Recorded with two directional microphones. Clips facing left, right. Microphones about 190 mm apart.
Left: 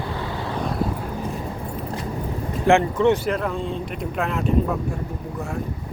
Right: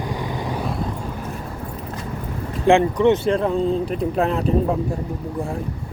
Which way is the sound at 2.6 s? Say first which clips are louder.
Right 2 dB; 15° right (ahead or behind).